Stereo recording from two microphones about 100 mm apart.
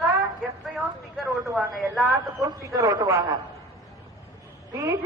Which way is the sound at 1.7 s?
Centre (ahead or behind).